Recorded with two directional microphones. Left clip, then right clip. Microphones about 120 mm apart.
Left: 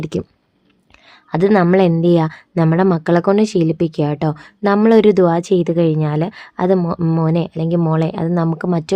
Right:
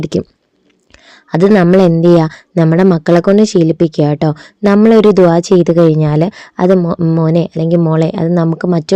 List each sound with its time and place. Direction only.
0.0 s speech: 40° right (ahead or behind)